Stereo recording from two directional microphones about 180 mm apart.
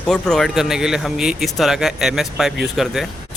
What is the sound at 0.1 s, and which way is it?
Speech, centre (ahead or behind).